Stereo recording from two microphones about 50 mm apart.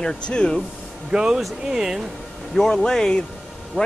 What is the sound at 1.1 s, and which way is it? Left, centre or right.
Speech, centre.